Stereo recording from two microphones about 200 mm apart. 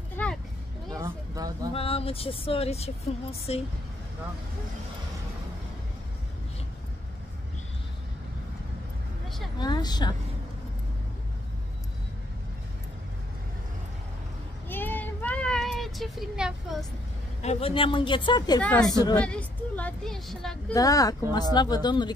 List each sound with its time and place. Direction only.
0.2 s a sound: 10° left (ahead or behind)
0.9 s a sound: 15° right (ahead or behind)
1.7 s speech: 30° left (ahead or behind)
9.6 s speech: 20° left (ahead or behind)
14.7 s child singing: 10° left (ahead or behind)
17.4 s speech: 30° left (ahead or behind)
18.6 s speech: 5° left (ahead or behind)
20.7 s speech: 15° left (ahead or behind)